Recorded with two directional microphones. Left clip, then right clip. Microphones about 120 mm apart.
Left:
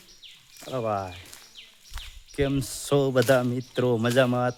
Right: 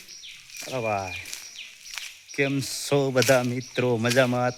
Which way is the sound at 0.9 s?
5° right (ahead or behind).